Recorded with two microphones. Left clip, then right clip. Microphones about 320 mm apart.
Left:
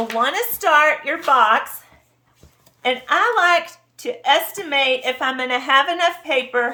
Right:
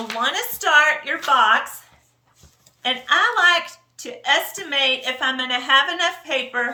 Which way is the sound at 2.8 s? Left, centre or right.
Centre.